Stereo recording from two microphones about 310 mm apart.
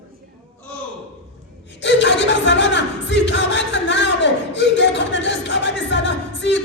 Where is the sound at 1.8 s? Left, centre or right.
Left.